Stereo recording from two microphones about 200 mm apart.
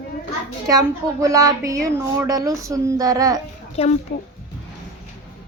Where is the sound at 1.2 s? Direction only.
15° right (ahead or behind).